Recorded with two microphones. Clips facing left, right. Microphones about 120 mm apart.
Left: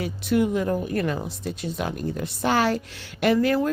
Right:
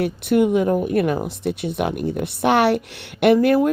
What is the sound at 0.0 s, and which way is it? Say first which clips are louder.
Speech: right 5 dB; 60° right (ahead or behind).